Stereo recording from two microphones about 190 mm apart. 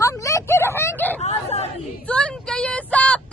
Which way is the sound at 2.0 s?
5° left (ahead or behind).